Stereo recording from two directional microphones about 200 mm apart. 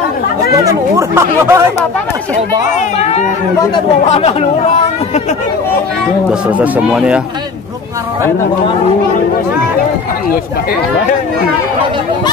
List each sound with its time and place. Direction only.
0.7 s speech: 15° right (ahead or behind)
3.0 s speech: 35° left (ahead or behind)
6.6 s speech: 5° right (ahead or behind)